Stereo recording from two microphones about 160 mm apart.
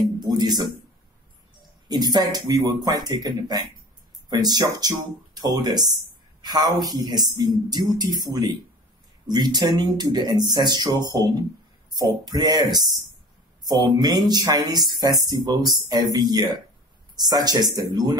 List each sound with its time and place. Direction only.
0.2 s speech: 25° right (ahead or behind)
1.9 s speech: 25° right (ahead or behind)
13.7 s speech: 25° right (ahead or behind)